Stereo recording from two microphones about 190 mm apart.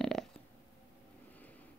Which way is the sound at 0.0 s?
Centre (ahead or behind).